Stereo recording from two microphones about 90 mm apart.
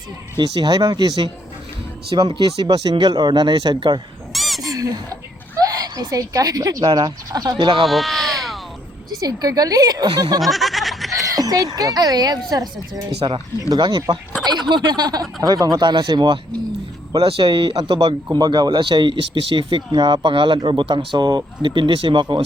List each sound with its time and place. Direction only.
0.3 s speech: 50° right (ahead or behind)
4.3 s bird: centre (ahead or behind)
4.6 s a sound: 40° right (ahead or behind)
5.6 s speech: 45° right (ahead or behind)
7.6 s speech: 80° right
7.9 s a sound: centre (ahead or behind)
9.0 s speech: 45° right (ahead or behind)
10.4 s a sound: centre (ahead or behind)
11.3 s speech: 45° right (ahead or behind)
13.8 s speech: 55° right (ahead or behind)
17.2 s speech: 85° right; by 18.0 s 65° right (ahead or behind)
18.0 s speech: 45° right (ahead or behind); by 22.4 s 60° right (ahead or behind)